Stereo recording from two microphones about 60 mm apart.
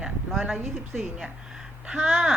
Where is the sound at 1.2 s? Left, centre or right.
Centre.